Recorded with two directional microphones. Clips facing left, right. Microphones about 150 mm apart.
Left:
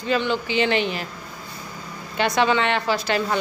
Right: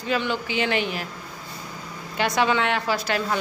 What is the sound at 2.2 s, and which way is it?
A woman's voice, 5° right (ahead or behind).